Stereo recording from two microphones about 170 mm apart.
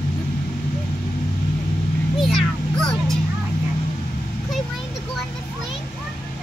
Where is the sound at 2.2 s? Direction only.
Centre (ahead or behind).